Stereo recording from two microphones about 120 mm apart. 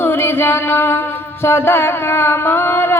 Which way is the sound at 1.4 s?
20° left (ahead or behind).